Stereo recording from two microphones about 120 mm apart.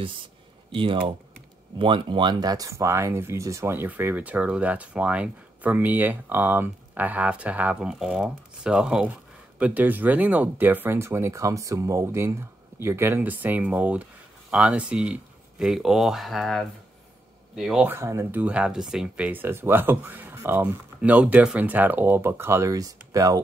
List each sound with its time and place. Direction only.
0.7 s speech: 45° right (ahead or behind); by 17.8 s 5° right (ahead or behind)
17.8 s speech: 20° right (ahead or behind)
18.4 s speech: 10° right (ahead or behind); by 23.4 s 30° right (ahead or behind)